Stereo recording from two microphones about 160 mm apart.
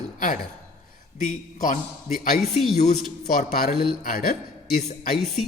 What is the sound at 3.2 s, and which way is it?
A man's voice, 65° left (ahead or behind).